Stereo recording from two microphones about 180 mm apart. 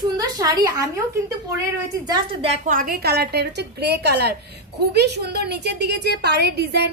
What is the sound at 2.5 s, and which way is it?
A woman's voice, 50° right (ahead or behind).